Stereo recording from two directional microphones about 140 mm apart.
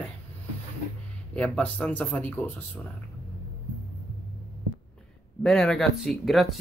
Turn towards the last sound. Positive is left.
turn(degrees=0)  # may be behind; listen again after turning